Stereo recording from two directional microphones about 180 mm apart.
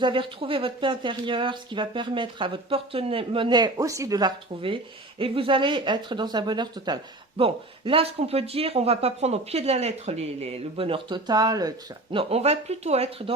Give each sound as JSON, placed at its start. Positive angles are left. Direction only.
{"t": 0.0, "sound": "speech", "side_deg": -30}
{"t": 12.1, "sound": "speech", "side_deg": -35}